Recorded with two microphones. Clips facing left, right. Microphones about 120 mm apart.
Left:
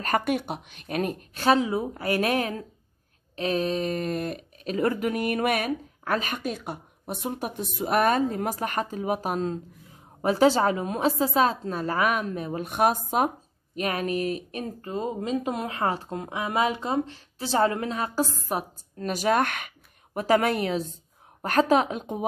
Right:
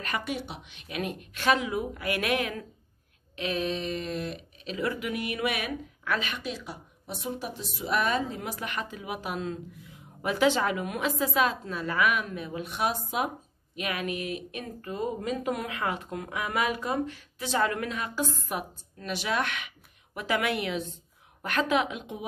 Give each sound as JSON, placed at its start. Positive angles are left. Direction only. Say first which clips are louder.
{"t": 0.0, "sound": "speech", "louder": "left 7 dB", "side_deg": 50}